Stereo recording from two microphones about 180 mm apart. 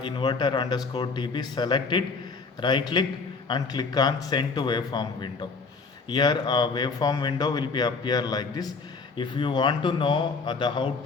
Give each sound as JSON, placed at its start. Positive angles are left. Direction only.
{"t": 0.0, "sound": "speech", "side_deg": 25}